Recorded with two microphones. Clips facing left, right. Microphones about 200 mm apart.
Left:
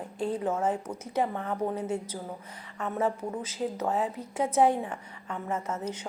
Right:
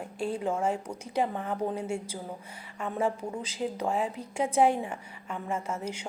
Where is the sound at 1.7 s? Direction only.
10° right (ahead or behind).